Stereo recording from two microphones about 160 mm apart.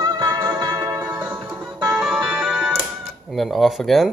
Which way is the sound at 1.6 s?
Centre (ahead or behind).